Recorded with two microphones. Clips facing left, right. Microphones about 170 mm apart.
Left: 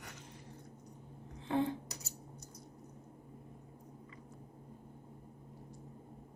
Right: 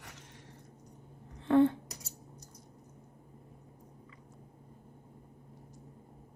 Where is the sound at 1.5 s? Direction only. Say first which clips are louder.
Right 9 dB; 60° right (ahead or behind).